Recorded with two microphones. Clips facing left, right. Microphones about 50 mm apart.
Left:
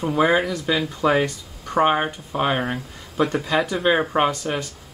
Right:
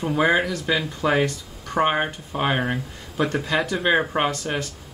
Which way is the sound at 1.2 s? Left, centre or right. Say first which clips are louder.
Right 1 dB; left.